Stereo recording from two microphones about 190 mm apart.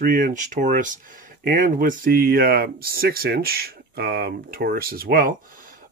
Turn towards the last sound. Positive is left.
turn(degrees=-50)  # may be behind; listen again after turning